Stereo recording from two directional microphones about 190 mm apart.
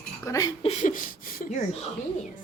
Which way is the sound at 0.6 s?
40° left (ahead or behind).